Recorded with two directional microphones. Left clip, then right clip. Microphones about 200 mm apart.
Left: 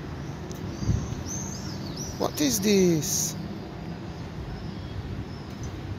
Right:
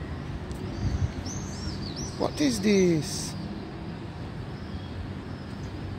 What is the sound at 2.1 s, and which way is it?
Speech, 10° right (ahead or behind).